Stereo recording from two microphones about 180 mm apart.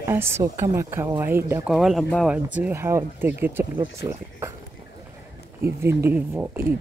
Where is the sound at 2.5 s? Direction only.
10° right (ahead or behind).